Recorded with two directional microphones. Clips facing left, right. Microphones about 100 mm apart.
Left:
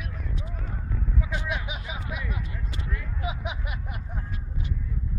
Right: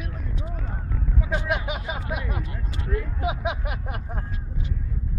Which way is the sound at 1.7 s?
60° right (ahead or behind).